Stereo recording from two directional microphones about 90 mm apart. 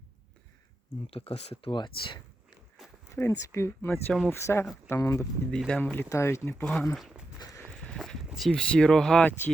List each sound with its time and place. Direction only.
1.1 s speech: 90° left
1.8 s a sound: 55° left (ahead or behind)
2.7 s a sound: 5° right (ahead or behind)
3.2 s speech: 35° left (ahead or behind)
5.5 s speech: 5° left (ahead or behind)
5.8 s speech: 20° left (ahead or behind)
6.1 s speech: 30° left (ahead or behind)
6.5 s speech: 10° left (ahead or behind)
6.9 s speech: 5° right (ahead or behind)
7.8 s walk: 5° left (ahead or behind)
8.3 s speech: centre (ahead or behind)